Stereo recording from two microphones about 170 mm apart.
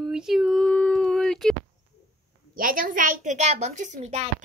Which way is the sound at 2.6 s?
55° right (ahead or behind).